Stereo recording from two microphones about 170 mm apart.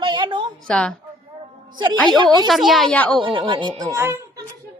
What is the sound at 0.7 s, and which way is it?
Speech, 5° left (ahead or behind).